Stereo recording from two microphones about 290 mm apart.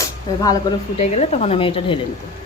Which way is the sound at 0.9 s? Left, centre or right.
Left.